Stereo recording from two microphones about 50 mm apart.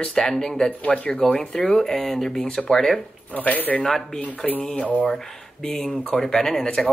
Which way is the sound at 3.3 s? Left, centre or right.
Left.